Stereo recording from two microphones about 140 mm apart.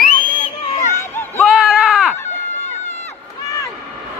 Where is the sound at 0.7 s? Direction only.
60° left (ahead or behind).